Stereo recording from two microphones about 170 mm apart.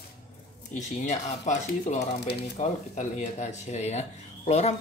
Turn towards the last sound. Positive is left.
turn(degrees=40)  # may be behind; listen again after turning